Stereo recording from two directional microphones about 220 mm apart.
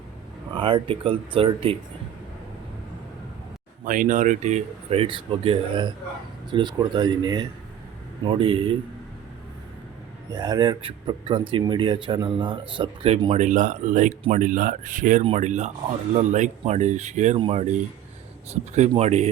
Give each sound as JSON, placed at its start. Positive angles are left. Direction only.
{"t": 0.5, "sound": "speech", "side_deg": -20}
{"t": 3.8, "sound": "speech", "side_deg": -35}
{"t": 10.3, "sound": "speech", "side_deg": -20}